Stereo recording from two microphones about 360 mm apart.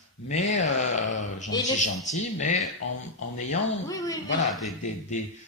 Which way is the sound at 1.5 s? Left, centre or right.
Centre.